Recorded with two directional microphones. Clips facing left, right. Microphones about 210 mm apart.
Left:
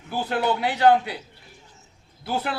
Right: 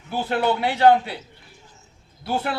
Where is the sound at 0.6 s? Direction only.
25° right (ahead or behind).